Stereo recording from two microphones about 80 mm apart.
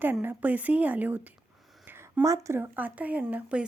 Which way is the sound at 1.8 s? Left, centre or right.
Right.